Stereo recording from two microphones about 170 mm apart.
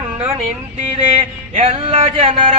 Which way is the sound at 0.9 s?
40° right (ahead or behind).